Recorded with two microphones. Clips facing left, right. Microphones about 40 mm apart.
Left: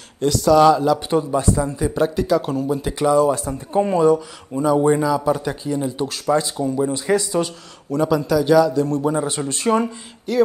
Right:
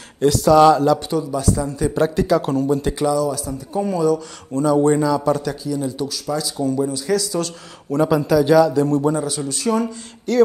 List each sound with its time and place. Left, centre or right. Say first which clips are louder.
0.2 s a man's voice: right 1 dB; centre
1.1 s speech: left 2 dB; left
1.9 s a man's voice: right 2 dB; centre
3.1 s speech: left 7 dB; left
4.6 s speech: right 1 dB; centre
6.0 s speech: left 4 dB; left
6.6 s speech: even; left
7.9 s a man's voice: right 2 dB; centre
9.1 s speech: left 1 dB; left
10.3 s speech: right 2 dB; centre